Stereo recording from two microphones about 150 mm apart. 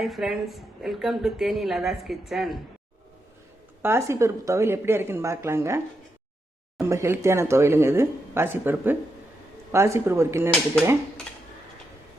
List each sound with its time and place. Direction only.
0.0 s speech: centre (ahead or behind)
3.8 s speech: 20° right (ahead or behind)
6.8 s speech: 20° right (ahead or behind)